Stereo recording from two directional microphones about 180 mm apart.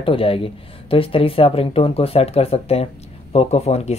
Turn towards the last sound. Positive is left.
turn(degrees=35)  # may be behind; listen again after turning